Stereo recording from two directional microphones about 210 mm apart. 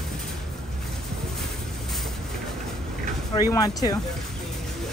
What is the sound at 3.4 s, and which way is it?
Speech, 15° left (ahead or behind).